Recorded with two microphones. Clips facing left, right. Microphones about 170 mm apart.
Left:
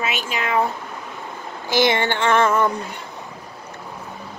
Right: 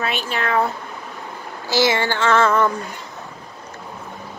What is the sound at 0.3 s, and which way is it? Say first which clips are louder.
Female singing: right 2 dB; 10° left (ahead or behind).